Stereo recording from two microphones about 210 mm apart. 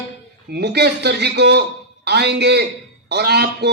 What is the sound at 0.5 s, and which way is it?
A man's voice, 50° right (ahead or behind).